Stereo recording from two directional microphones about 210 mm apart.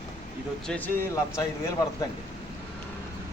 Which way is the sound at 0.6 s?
5° left (ahead or behind).